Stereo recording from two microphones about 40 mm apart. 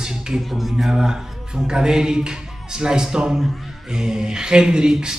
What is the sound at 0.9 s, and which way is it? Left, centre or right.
A man's voice, centre.